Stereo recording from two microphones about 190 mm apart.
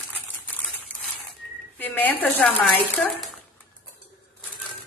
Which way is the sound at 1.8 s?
10° left (ahead or behind).